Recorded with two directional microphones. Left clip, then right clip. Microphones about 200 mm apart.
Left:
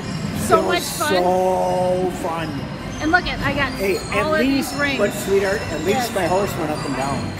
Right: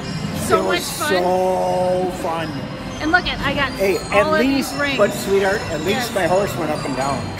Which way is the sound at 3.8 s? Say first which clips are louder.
Right 4 dB; 30° right (ahead or behind).